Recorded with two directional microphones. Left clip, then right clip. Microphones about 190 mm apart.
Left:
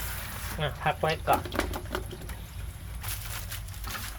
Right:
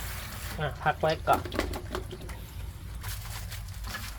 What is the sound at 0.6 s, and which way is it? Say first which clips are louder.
Speech: even; centre (ahead or behind).